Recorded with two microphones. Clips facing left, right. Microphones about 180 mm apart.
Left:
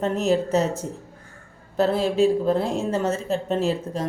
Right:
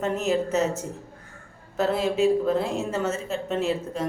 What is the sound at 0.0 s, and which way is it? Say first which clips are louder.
Speech: left 3 dB; 35° left (ahead or behind).